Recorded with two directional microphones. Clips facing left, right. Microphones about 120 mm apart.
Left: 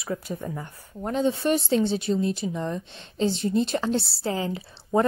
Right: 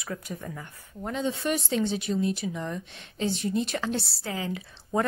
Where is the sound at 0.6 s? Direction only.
40° left (ahead or behind).